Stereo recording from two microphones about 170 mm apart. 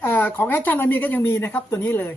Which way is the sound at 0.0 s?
10° left (ahead or behind).